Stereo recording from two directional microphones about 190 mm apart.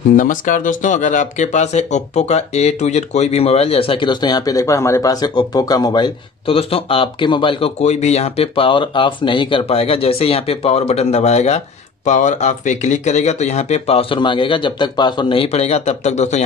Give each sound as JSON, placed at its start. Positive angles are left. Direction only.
{"t": 0.1, "sound": "speech", "side_deg": 45}